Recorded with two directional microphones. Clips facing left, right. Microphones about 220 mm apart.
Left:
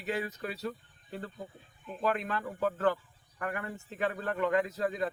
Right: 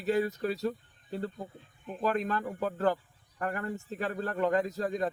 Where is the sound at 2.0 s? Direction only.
40° right (ahead or behind).